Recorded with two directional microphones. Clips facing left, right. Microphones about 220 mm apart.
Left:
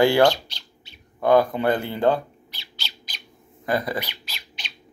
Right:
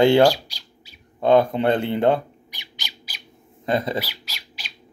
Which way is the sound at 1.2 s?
25° right (ahead or behind).